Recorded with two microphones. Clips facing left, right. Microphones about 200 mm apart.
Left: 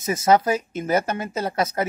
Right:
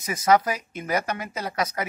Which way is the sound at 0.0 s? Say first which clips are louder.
Left 2 dB; 25° left (ahead or behind).